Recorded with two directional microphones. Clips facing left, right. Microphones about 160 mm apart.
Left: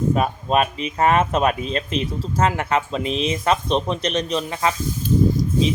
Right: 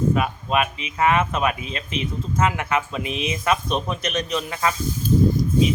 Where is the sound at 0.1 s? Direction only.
35° left (ahead or behind).